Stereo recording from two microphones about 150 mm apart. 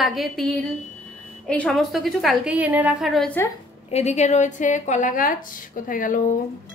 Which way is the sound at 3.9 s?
45° left (ahead or behind).